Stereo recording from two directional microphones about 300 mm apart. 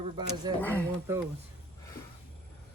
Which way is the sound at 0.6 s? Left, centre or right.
Centre.